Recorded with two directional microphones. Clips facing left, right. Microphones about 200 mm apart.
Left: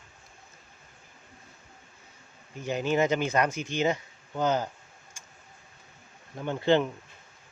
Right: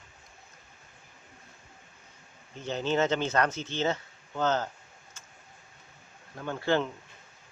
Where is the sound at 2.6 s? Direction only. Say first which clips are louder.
Left 2 dB; 10° left (ahead or behind).